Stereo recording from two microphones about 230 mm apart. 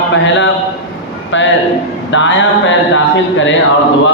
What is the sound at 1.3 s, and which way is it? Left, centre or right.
Speech, left.